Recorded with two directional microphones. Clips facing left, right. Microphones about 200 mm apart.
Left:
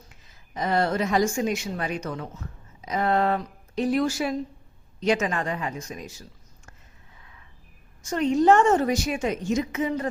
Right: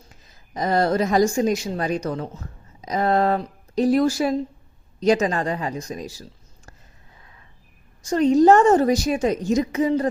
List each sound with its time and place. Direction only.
0.1 s a woman's voice: 40° right (ahead or behind)
8.0 s a woman's voice: 35° right (ahead or behind)